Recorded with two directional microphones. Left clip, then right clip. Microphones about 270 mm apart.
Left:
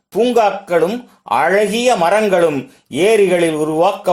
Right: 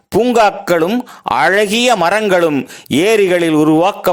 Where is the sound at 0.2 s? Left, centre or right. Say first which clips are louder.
Right 2 dB; right.